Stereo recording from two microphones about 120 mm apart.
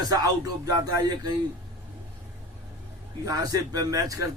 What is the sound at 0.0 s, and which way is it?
Speech, 30° right (ahead or behind).